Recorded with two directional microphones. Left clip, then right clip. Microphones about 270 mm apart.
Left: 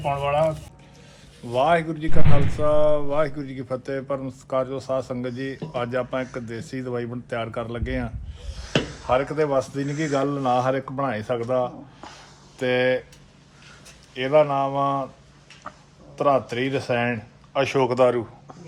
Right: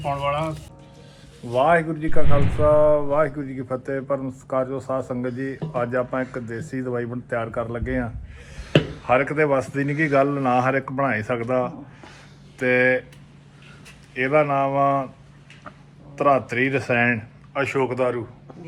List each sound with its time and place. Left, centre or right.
0.0 s speech: centre
1.5 s a man's voice: centre
14.1 s a man's voice: centre
16.1 s a man's voice: centre; by 18.2 s left